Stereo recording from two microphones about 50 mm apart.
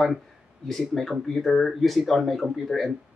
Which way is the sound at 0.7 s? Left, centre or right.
Centre.